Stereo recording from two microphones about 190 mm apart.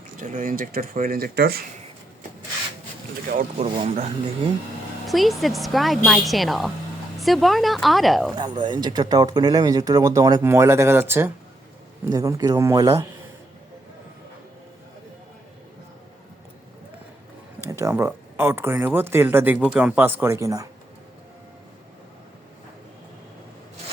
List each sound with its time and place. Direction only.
0.2 s speech: 45° right (ahead or behind)
3.2 s speech: 45° right (ahead or behind)
3.8 s speech: 35° right (ahead or behind)
5.0 s speech: centre (ahead or behind)
8.4 s speech: 25° right (ahead or behind)
17.6 s speech: 15° right (ahead or behind)